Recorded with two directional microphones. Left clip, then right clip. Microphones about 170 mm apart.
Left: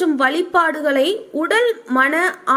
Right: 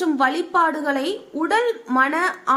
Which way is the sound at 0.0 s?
15° left (ahead or behind).